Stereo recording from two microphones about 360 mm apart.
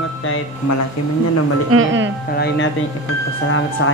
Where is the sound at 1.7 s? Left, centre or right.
Right.